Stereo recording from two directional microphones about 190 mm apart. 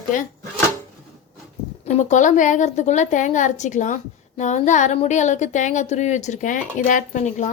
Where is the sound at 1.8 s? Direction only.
40° left (ahead or behind).